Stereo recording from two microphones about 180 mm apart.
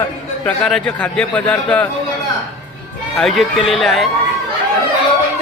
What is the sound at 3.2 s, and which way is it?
Speech, centre (ahead or behind).